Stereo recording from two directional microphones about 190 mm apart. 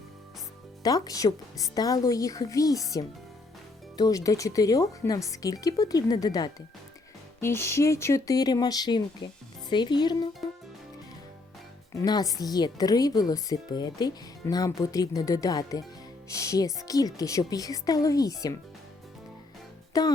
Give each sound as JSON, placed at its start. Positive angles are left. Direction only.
{"t": 0.8, "sound": "speech", "side_deg": 20}
{"t": 3.9, "sound": "speech", "side_deg": 20}
{"t": 11.9, "sound": "speech", "side_deg": 20}
{"t": 19.9, "sound": "a child's voice", "side_deg": 20}